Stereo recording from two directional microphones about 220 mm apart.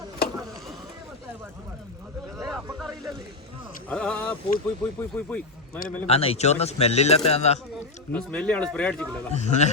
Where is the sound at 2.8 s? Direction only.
Centre (ahead or behind).